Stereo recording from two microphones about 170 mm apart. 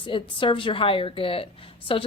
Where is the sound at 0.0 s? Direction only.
30° left (ahead or behind).